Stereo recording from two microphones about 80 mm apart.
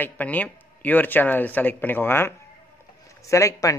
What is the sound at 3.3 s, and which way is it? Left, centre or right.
Speech, left.